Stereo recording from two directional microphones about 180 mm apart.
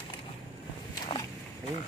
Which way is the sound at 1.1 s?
30° left (ahead or behind).